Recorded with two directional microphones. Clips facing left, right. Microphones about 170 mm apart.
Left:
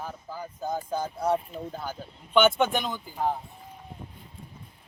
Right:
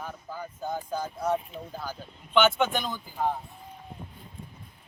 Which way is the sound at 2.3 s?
15° left (ahead or behind).